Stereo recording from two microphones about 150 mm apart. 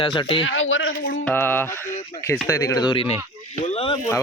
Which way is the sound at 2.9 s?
40° left (ahead or behind).